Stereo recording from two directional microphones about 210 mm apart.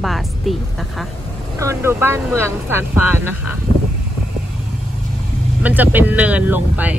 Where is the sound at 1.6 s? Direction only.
15° right (ahead or behind).